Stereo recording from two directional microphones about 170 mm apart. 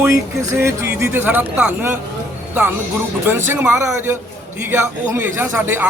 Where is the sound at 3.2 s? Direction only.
15° right (ahead or behind).